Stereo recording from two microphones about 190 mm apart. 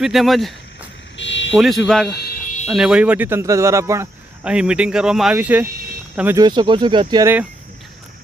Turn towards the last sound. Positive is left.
turn(degrees=-20)  # may be behind; listen again after turning